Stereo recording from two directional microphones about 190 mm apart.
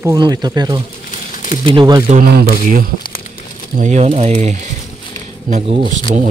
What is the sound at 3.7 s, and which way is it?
Speech, 40° right (ahead or behind).